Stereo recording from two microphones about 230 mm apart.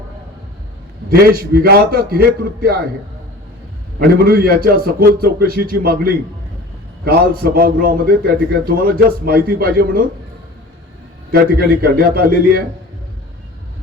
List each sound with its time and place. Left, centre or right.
1.3 s a man's voice: right
3.9 s a man's voice: right
11.3 s a man's voice: right